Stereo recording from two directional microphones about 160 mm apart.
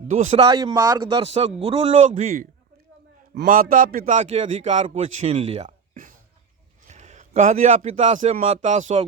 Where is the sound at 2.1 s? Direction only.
55° right (ahead or behind).